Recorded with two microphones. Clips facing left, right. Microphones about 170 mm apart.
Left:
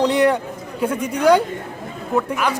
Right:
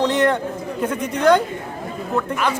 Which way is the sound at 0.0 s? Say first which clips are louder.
Left 2 dB; 10° left (ahead or behind).